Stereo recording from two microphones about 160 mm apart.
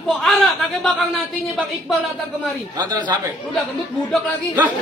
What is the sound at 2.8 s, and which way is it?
Speech, 25° right (ahead or behind).